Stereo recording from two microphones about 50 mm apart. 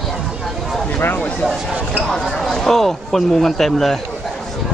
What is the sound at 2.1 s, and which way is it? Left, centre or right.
Speech, centre.